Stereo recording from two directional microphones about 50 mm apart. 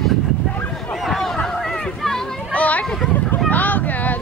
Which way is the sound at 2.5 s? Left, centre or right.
Left.